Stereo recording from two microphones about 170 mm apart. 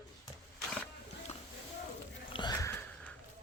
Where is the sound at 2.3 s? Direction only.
25° left (ahead or behind).